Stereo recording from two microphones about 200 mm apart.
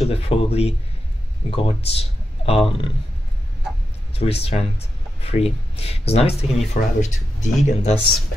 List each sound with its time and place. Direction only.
0.0 s speech: 30° left (ahead or behind)
4.1 s speech: 30° left (ahead or behind)